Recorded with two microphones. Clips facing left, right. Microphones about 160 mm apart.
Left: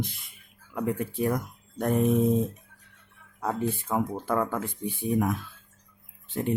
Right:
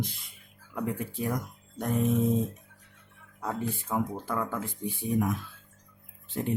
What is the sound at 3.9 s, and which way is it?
Speech, 60° left (ahead or behind).